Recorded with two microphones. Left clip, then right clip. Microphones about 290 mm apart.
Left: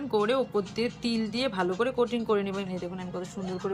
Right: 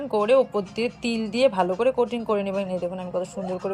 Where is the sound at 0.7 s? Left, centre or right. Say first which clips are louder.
Right 4 dB; centre.